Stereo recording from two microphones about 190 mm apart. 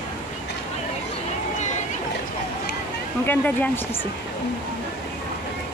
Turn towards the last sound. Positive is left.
turn(degrees=10)  # may be behind; listen again after turning